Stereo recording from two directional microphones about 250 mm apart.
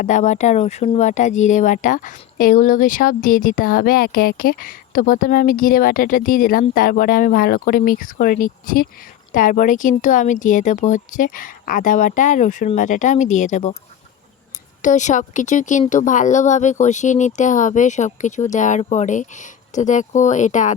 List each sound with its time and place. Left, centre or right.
0.0 s speech: left
14.8 s speech: left